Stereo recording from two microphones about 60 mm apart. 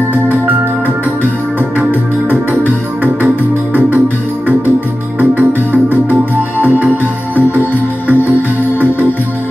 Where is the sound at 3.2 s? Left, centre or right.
Right.